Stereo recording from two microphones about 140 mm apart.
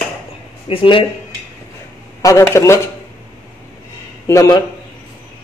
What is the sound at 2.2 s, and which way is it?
Speech, 25° left (ahead or behind).